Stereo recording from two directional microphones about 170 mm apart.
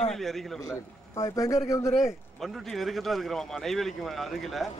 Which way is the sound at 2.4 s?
Centre (ahead or behind).